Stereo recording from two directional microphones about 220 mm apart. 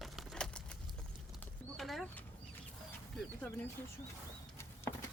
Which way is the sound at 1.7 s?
Centre (ahead or behind).